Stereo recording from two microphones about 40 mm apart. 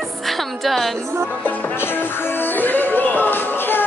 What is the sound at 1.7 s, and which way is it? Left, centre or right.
Music, left.